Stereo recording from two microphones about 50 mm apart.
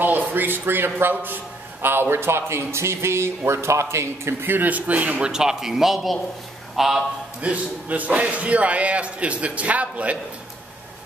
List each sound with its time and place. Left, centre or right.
0.0 s a man's voice: right
4.5 s speech: right
5.3 s a man's voice: centre
7.4 s a man's voice: right